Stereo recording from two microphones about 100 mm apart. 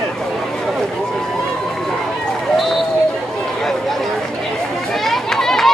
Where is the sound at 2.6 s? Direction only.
Centre (ahead or behind).